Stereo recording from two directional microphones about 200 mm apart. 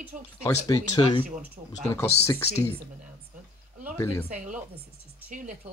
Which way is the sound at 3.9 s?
15° left (ahead or behind).